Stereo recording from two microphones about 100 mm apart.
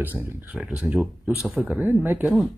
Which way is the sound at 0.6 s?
10° right (ahead or behind).